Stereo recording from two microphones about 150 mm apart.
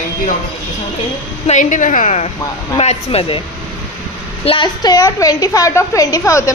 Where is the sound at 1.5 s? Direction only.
55° left (ahead or behind); by 3.4 s 40° left (ahead or behind).